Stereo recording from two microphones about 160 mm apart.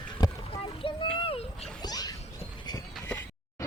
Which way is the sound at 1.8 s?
25° left (ahead or behind).